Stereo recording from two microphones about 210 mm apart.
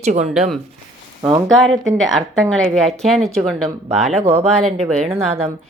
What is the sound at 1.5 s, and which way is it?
Speech, centre (ahead or behind).